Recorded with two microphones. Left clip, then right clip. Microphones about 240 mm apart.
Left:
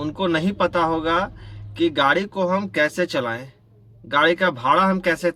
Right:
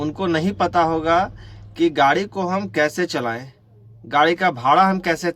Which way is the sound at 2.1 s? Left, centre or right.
Centre.